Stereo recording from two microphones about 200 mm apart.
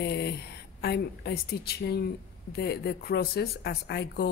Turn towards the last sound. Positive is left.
turn(degrees=55)  # may be behind; listen again after turning